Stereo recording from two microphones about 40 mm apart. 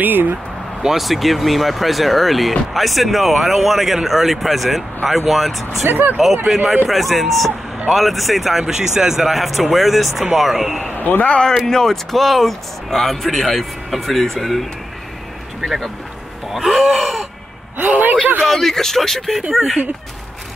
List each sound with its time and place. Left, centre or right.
0.0 s speech: right
0.8 s speech: centre
5.9 s speech: right
6.3 s speech: centre
10.9 s a man's voice: left
11.4 s speech: centre
16.5 s a sound: centre
17.8 s speech: right
18.4 s speech: centre